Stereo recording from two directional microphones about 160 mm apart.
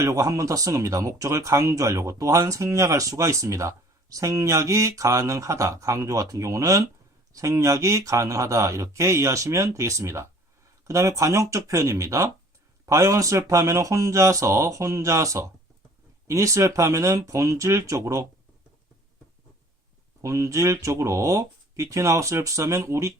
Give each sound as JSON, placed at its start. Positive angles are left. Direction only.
{"t": 0.0, "sound": "speech", "side_deg": -20}
{"t": 20.2, "sound": "speech", "side_deg": -20}